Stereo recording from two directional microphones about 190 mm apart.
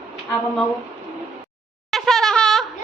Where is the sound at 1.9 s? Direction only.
Centre (ahead or behind).